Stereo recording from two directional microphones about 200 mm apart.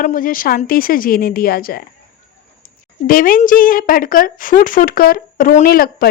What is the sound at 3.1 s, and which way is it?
A woman's voice, 45° left (ahead or behind).